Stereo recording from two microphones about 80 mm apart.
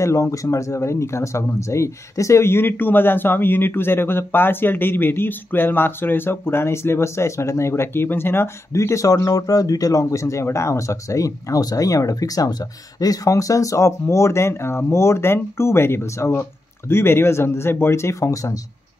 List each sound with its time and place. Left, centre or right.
0.0 s speech: left